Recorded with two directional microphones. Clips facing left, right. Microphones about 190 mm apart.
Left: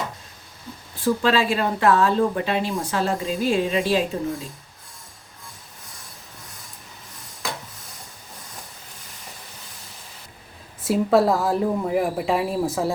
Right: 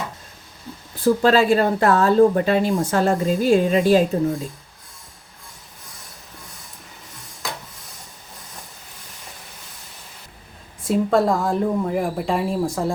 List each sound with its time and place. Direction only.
1.0 s speech: 40° right (ahead or behind)
10.8 s speech: 5° left (ahead or behind)